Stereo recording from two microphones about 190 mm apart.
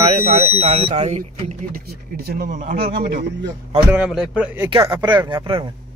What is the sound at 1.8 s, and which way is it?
Speech, 55° right (ahead or behind).